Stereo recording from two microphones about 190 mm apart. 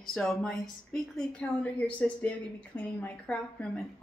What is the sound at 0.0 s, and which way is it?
A woman's voice, centre (ahead or behind).